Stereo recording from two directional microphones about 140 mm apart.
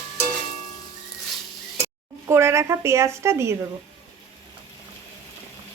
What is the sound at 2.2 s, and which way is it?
A woman's voice, 20° right (ahead or behind).